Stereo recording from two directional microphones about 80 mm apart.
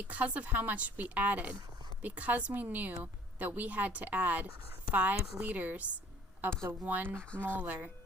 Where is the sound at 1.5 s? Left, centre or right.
Right.